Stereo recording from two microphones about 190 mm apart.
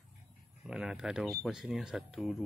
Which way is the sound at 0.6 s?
5° right (ahead or behind).